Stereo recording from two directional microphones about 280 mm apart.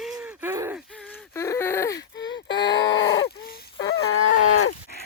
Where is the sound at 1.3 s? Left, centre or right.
Centre.